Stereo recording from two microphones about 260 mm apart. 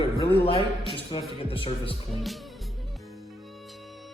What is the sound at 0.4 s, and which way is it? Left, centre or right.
A man's voice, left.